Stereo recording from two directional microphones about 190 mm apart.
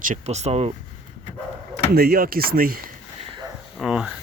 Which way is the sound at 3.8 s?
5° right (ahead or behind).